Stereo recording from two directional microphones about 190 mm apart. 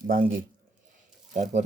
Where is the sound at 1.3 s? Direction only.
40° right (ahead or behind).